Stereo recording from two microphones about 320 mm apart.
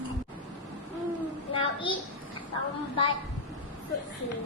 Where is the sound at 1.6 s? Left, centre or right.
Centre.